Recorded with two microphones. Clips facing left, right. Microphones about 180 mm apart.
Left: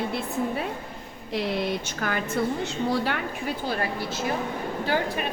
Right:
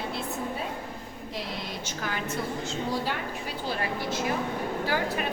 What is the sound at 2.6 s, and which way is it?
Speech, 65° left (ahead or behind).